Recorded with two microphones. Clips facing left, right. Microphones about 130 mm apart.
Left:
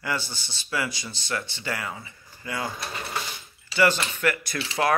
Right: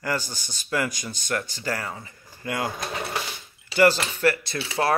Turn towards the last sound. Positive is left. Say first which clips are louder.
# right 3 dB
turn(degrees=-30)  # may be behind; listen again after turning